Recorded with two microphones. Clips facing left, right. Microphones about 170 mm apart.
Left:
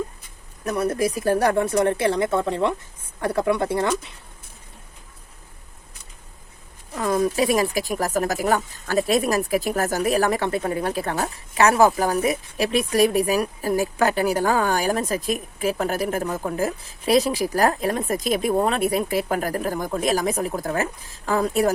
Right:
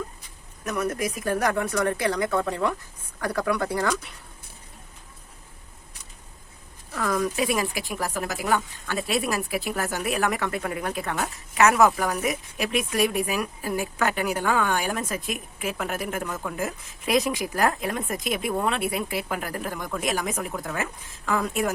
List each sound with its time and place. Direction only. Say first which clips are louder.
0.6 s speech: left 5 dB; 30° left (ahead or behind)
6.9 s speech: left 4 dB; 25° left (ahead or behind)